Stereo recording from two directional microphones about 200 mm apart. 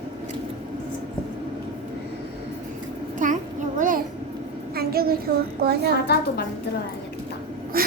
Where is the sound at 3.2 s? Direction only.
40° right (ahead or behind).